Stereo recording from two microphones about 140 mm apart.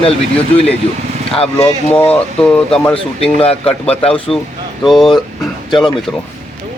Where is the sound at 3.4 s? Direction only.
45° left (ahead or behind).